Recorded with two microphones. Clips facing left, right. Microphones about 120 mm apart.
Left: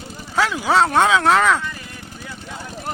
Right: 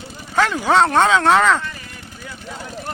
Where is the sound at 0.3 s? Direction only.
5° left (ahead or behind).